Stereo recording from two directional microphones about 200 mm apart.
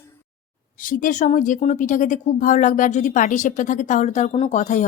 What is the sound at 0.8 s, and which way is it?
Speech, 40° left (ahead or behind).